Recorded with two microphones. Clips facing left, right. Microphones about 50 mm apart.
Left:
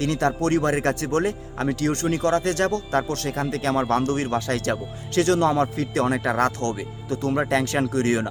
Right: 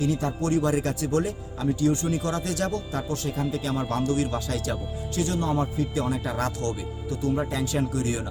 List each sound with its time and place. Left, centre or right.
0.0 s speech: left